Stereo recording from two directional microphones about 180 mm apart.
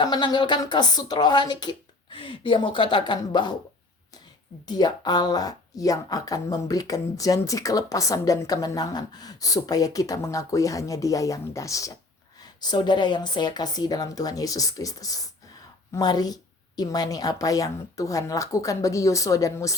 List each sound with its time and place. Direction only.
0.0 s speech: 25° left (ahead or behind)
4.6 s speech: 25° left (ahead or behind)